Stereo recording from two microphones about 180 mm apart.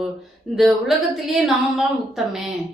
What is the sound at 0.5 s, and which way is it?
A woman's voice, centre (ahead or behind).